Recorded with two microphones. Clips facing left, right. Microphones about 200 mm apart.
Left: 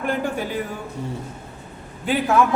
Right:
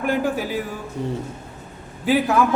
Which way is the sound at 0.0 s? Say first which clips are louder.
Right 2 dB; 5° right (ahead or behind).